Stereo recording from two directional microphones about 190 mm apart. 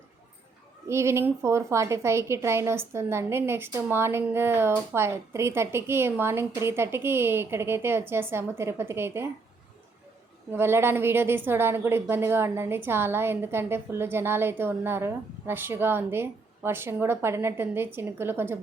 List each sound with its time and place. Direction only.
0.9 s a woman's voice: 15° right (ahead or behind)
10.5 s a woman's voice: 10° right (ahead or behind)